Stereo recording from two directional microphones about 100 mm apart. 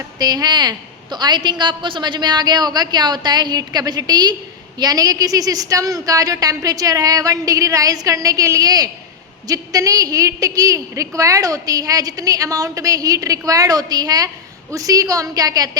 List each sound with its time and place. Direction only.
0.2 s a woman's voice: 40° right (ahead or behind)